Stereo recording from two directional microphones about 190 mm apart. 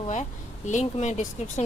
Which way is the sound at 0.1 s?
40° left (ahead or behind).